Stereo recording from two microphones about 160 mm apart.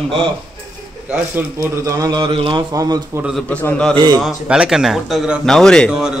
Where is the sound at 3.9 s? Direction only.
30° right (ahead or behind).